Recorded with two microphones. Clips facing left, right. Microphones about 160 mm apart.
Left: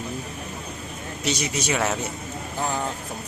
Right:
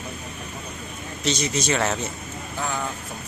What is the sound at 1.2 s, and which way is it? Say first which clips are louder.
Speech: right 2 dB; 10° left (ahead or behind).